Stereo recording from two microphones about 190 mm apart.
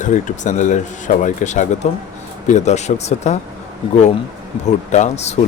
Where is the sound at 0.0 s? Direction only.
40° left (ahead or behind).